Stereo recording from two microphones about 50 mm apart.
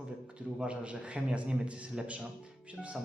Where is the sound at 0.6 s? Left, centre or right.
Right.